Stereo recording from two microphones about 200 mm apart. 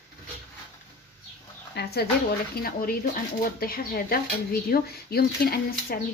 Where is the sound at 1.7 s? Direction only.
55° left (ahead or behind).